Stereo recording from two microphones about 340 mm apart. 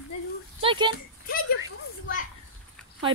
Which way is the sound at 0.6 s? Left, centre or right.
Centre.